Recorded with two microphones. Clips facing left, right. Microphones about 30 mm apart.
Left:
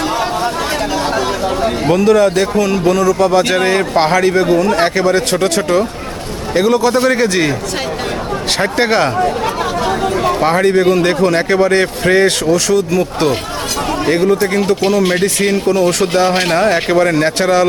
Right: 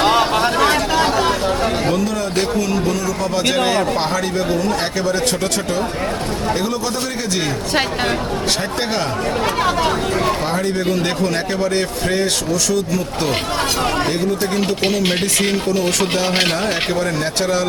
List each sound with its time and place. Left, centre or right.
0.0 s a sound: right
1.9 s a man's voice: left
3.6 s a man's voice: left
8.8 s a man's voice: left
10.4 s a man's voice: left
10.8 s a man's voice: left
12.5 s speech: left
14.1 s speech: left
16.0 s speech: left
16.6 s speech: left